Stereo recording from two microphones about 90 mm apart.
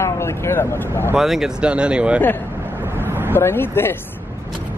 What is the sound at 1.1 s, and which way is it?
Speech, 5° right (ahead or behind).